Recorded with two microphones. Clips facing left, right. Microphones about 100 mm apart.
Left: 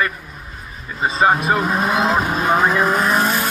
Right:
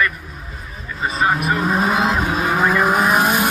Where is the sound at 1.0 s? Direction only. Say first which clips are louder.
Left 3 dB; 25° left (ahead or behind).